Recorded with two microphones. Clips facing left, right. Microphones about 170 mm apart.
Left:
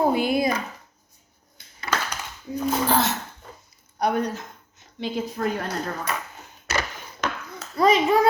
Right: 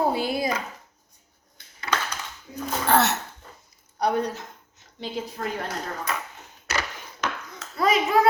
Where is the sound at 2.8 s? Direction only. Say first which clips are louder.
Right 4 dB; 70° right (ahead or behind).